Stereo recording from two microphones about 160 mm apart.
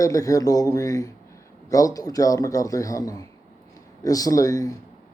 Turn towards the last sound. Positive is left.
turn(degrees=20)  # may be behind; listen again after turning